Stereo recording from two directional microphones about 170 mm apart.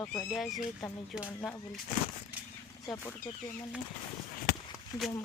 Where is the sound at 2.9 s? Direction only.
Centre (ahead or behind).